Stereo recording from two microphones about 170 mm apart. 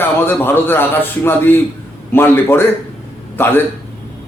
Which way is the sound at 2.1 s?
15° left (ahead or behind).